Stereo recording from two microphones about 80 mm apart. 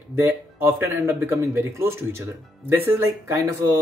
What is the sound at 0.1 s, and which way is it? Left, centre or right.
A man's voice, right.